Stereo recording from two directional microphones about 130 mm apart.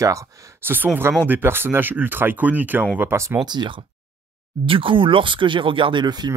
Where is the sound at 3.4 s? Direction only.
35° right (ahead or behind).